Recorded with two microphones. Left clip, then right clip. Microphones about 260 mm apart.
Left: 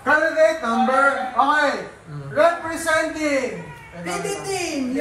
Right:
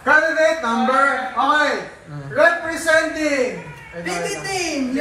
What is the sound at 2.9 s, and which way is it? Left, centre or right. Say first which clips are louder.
Speech: right 3 dB; centre.